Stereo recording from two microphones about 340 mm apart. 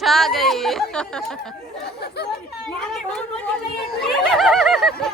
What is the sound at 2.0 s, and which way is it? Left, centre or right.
Speech, left.